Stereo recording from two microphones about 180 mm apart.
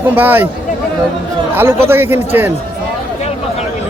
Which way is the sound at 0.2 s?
10° right (ahead or behind).